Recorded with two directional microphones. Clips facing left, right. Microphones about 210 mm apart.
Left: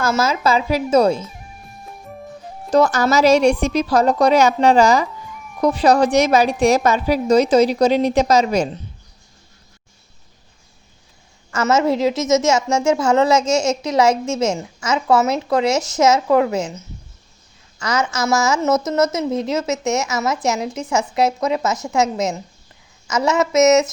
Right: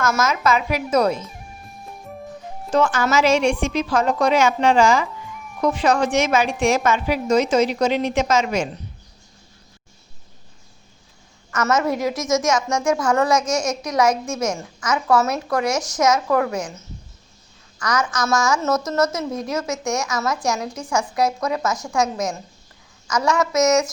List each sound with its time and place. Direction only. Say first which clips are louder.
0.0 s a woman's voice: left 2 dB; 30° left (ahead or behind)
1.2 s music: left 2 dB; centre (ahead or behind)
2.6 s a woman's voice: left 4 dB; 40° left (ahead or behind)
11.5 s a woman's voice: left 4 dB; 25° left (ahead or behind)